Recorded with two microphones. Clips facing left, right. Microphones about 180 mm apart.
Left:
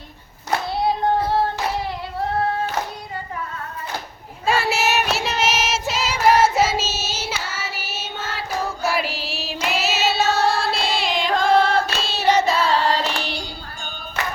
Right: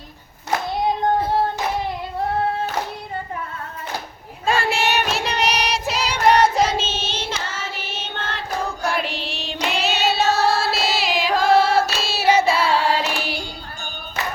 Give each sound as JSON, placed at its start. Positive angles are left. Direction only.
{"t": 4.4, "sound": "child singing", "side_deg": 5}
{"t": 12.0, "sound": "singing", "side_deg": -10}